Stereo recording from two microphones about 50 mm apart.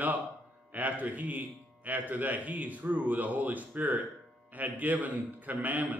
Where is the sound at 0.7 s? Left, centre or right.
Right.